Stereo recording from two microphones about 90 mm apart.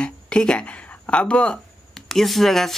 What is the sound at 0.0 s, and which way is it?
Speech, 10° left (ahead or behind).